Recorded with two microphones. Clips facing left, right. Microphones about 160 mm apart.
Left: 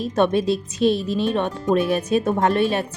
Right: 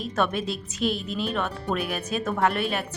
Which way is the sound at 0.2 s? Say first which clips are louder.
Left 8 dB; 25° left (ahead or behind).